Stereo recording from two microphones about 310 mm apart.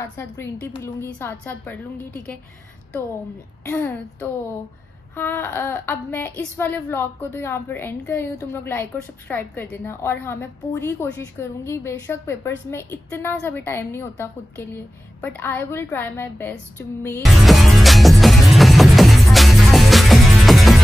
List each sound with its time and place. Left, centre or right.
0.0 s a woman's voice: centre
3.6 s a woman's voice: centre
15.2 s a sound: centre